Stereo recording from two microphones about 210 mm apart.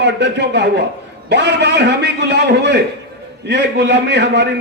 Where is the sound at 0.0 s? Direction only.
55° right (ahead or behind).